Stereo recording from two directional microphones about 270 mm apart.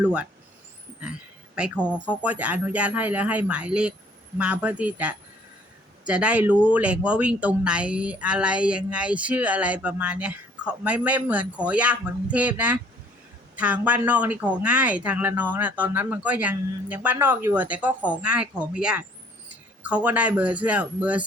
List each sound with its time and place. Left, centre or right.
0.0 s speech: centre